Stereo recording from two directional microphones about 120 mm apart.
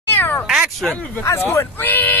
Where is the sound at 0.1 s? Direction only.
15° left (ahead or behind).